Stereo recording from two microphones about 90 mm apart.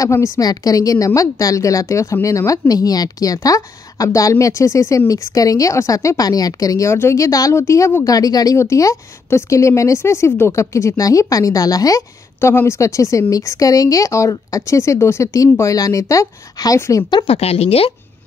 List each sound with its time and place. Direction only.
0.0 s a woman's voice: 35° left (ahead or behind)
0.4 s a woman's voice: 45° left (ahead or behind)
12.4 s a woman's voice: 30° left (ahead or behind)
17.1 s speech: 80° left